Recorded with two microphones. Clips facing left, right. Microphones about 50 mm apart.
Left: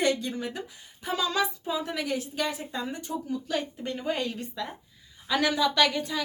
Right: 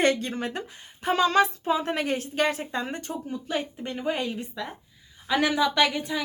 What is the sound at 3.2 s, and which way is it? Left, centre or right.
A woman's voice, right.